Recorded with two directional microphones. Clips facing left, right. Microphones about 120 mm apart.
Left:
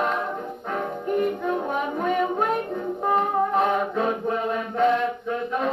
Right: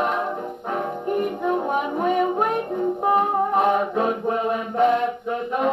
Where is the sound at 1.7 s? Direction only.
15° right (ahead or behind).